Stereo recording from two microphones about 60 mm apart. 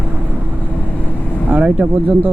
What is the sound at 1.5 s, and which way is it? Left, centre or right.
Speech, centre.